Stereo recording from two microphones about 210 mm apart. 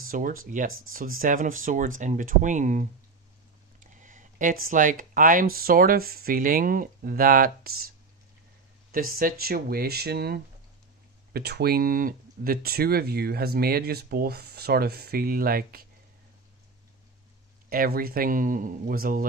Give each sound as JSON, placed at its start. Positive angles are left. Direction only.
{"t": 0.0, "sound": "speech", "side_deg": -45}
{"t": 0.7, "sound": "speech", "side_deg": -75}
{"t": 1.2, "sound": "speech", "side_deg": -40}
{"t": 3.9, "sound": "a sound", "side_deg": -35}
{"t": 4.6, "sound": "speech", "side_deg": -40}
{"t": 8.9, "sound": "speech", "side_deg": -45}
{"t": 17.6, "sound": "speech", "side_deg": -45}